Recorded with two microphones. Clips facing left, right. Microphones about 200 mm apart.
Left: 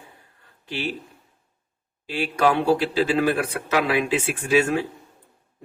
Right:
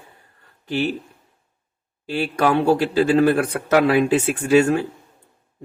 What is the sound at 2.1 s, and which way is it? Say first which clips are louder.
A man's voice: right 2 dB; 50° right (ahead or behind).